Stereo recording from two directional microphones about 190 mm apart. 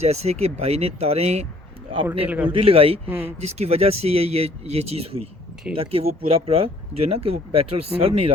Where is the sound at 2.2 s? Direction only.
10° right (ahead or behind).